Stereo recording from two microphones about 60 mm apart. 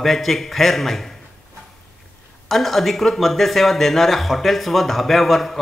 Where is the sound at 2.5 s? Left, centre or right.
Centre.